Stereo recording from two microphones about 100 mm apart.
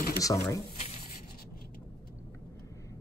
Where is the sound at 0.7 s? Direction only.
90° left.